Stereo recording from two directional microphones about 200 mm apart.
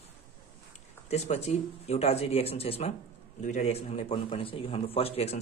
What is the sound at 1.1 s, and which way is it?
A man's voice, 35° left (ahead or behind).